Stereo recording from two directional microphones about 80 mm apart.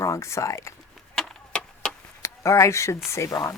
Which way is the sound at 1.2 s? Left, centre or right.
Centre.